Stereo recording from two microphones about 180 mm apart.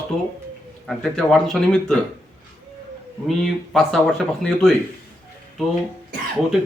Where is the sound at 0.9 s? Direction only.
Centre (ahead or behind).